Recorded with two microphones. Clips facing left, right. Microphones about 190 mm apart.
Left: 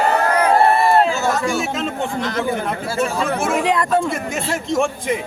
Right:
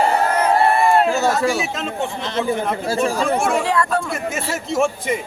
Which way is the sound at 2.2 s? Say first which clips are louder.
Left 1 dB; 25° right (ahead or behind).